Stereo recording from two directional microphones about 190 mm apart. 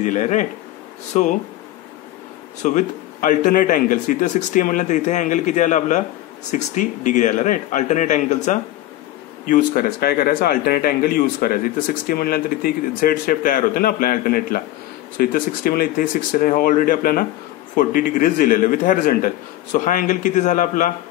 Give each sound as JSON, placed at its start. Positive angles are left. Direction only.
{"t": 0.0, "sound": "speech", "side_deg": 40}
{"t": 2.6, "sound": "speech", "side_deg": 40}